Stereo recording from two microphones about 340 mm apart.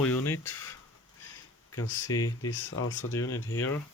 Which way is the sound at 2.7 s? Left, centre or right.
Left.